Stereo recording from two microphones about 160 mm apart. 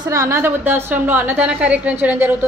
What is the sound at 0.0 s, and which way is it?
A woman's voice, 20° right (ahead or behind).